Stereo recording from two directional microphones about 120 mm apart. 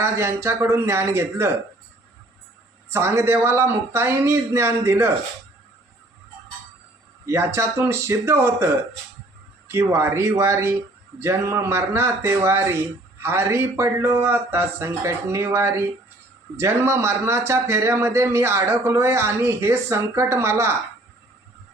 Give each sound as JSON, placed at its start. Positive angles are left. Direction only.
{"t": 0.0, "sound": "a man's voice", "side_deg": -20}
{"t": 2.9, "sound": "a man's voice", "side_deg": -25}
{"t": 7.3, "sound": "a man's voice", "side_deg": -25}